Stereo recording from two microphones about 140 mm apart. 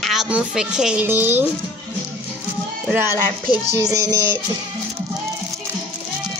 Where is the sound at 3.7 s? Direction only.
25° right (ahead or behind).